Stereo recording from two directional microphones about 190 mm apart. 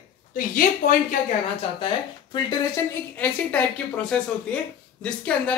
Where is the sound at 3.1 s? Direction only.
10° left (ahead or behind).